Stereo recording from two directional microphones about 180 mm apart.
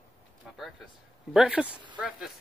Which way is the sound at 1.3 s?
5° right (ahead or behind).